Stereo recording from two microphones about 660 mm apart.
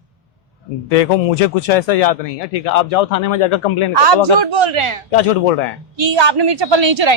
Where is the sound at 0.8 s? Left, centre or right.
Left.